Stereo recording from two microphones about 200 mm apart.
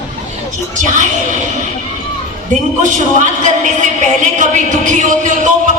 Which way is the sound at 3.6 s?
40° right (ahead or behind).